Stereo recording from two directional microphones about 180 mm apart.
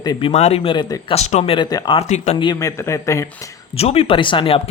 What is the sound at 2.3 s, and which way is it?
Speech, 20° left (ahead or behind).